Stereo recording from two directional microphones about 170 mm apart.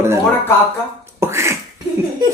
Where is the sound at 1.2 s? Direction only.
15° right (ahead or behind).